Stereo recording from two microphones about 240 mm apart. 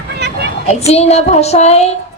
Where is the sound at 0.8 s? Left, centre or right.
Left.